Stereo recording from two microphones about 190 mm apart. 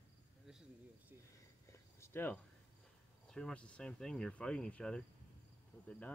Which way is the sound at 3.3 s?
5° left (ahead or behind).